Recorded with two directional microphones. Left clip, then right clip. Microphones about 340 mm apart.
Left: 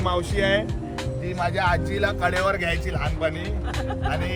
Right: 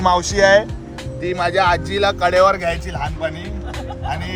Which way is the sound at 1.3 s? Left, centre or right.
Right.